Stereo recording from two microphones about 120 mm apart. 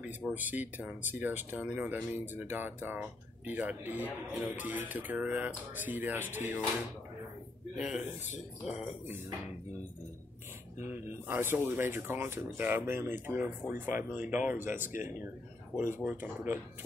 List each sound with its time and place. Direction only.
0.3 s speech: 15° right (ahead or behind)
7.7 s speech: 5° right (ahead or behind)
10.9 s speech: 20° right (ahead or behind)
16.0 s speech: 10° right (ahead or behind)